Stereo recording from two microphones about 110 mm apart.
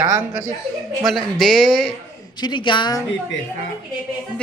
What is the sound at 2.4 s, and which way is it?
Speech, 45° left (ahead or behind).